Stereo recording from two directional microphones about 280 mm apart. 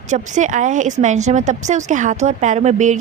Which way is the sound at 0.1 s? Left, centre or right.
Right.